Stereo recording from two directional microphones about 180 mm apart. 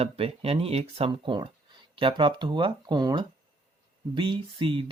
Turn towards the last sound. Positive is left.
turn(degrees=-30)  # may be behind; listen again after turning